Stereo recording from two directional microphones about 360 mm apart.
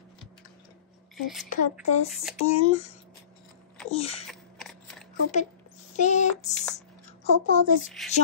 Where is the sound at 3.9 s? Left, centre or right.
Centre.